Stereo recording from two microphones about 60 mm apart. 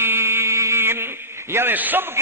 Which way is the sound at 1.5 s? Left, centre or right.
Right.